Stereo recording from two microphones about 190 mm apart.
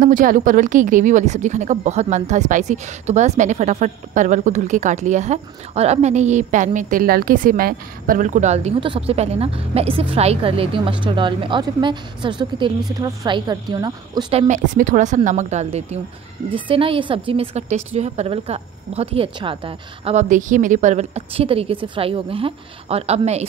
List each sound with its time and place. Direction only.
0.0 s a woman's voice: 45° right (ahead or behind); by 14.4 s 20° right (ahead or behind)
14.5 s a woman's voice: 40° right (ahead or behind); by 20.2 s 25° right (ahead or behind)
20.2 s a woman's voice: 40° right (ahead or behind)